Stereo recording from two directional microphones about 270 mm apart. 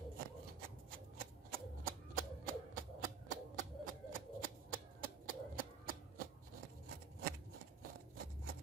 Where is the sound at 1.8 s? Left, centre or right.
Right.